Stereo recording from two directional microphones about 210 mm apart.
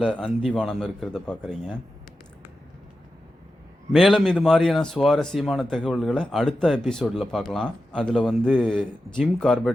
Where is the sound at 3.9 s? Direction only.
Centre (ahead or behind).